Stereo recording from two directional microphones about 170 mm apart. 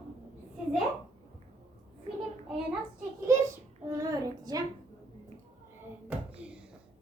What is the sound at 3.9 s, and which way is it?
Child singing, 20° right (ahead or behind).